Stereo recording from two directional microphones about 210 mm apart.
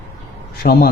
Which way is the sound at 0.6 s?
45° left (ahead or behind).